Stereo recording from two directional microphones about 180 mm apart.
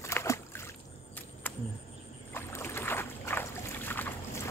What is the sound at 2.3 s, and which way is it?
Boat, 15° left (ahead or behind).